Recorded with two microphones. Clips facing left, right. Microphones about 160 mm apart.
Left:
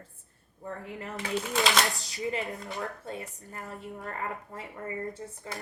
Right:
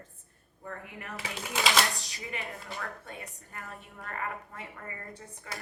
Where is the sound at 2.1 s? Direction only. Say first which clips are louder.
Left 7 dB; 20° left (ahead or behind).